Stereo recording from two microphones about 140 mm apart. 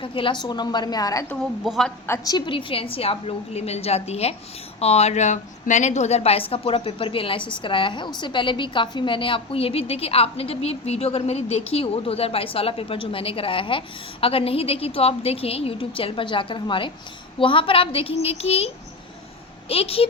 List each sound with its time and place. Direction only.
0.0 s a woman's voice: 40° left (ahead or behind)
1.3 s a woman's voice: centre (ahead or behind)
2.0 s a woman's voice: 25° left (ahead or behind); by 20.1 s 45° left (ahead or behind)